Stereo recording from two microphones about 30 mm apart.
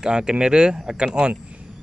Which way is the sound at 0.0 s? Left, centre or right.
Right.